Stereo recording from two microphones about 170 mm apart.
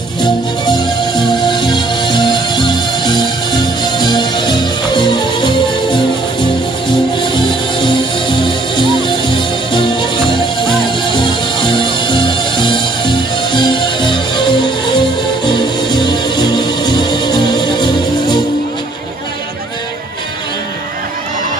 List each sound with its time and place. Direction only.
0.2 s music: 25° left (ahead or behind)